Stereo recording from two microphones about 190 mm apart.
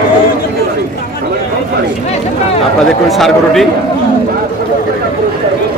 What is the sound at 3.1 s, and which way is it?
Speech, centre (ahead or behind).